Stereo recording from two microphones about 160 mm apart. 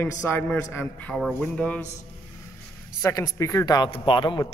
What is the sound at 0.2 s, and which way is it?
Speech, 10° left (ahead or behind).